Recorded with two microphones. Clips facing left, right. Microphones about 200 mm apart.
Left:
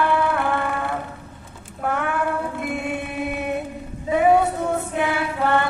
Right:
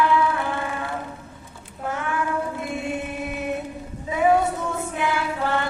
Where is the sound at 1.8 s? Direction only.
60° left (ahead or behind).